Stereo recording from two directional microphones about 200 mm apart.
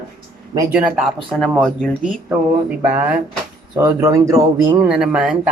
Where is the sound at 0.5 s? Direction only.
15° right (ahead or behind).